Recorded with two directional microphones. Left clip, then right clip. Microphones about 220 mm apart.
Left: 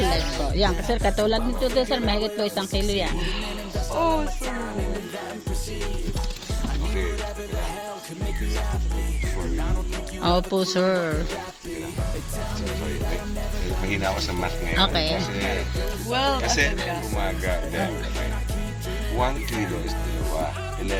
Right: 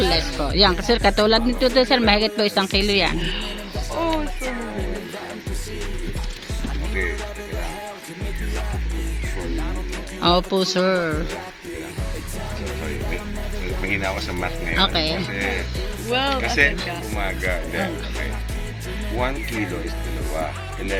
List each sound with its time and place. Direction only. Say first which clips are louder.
0.1 s speech: right 4 dB; 20° right (ahead or behind)
3.2 s speech: right 3 dB; 15° left (ahead or behind)
10.2 s speech: right 4 dB; 5° right (ahead or behind)
13.8 s speech: right 2 dB; centre (ahead or behind)
16.0 s speech: right 2 dB; 10° left (ahead or behind)
16.4 s speech: right 4 dB; centre (ahead or behind)
19.1 s speech: right 1 dB; centre (ahead or behind)
20.3 s music: right 1 dB; centre (ahead or behind)